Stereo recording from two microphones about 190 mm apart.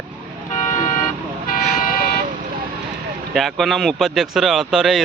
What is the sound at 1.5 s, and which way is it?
Vehicle, 50° left (ahead or behind).